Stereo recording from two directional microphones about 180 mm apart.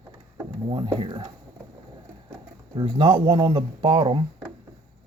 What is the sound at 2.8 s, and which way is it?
Speech, 30° right (ahead or behind).